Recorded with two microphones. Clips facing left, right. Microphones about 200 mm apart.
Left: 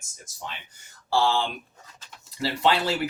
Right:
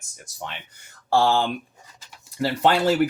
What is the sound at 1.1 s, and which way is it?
Speech, 50° right (ahead or behind).